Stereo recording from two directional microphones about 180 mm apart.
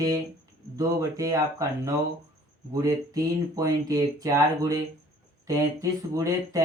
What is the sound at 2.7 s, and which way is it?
Speech, 20° right (ahead or behind).